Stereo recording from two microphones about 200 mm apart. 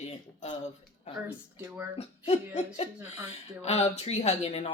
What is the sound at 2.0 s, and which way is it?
Speech, 30° left (ahead or behind).